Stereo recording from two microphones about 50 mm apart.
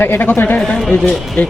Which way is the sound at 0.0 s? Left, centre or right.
Left.